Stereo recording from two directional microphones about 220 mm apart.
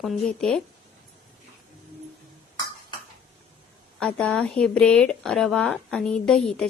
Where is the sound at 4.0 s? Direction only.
5° left (ahead or behind).